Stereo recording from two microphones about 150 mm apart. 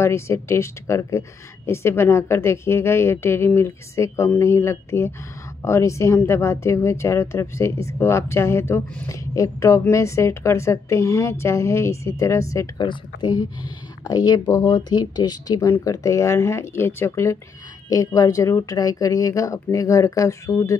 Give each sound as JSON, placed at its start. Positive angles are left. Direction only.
{"t": 0.0, "sound": "a woman's voice", "side_deg": 15}